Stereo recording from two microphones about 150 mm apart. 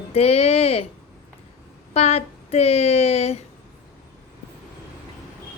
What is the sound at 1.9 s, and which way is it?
Speech, 45° left (ahead or behind).